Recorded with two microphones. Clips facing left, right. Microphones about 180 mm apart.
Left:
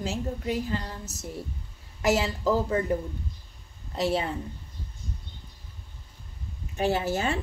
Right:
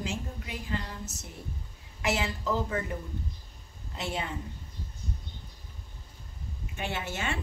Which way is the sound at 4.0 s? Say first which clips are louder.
Left 8 dB; 35° left (ahead or behind).